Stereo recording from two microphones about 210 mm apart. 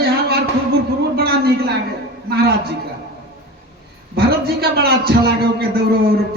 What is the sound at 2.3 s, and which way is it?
Speech, 45° right (ahead or behind).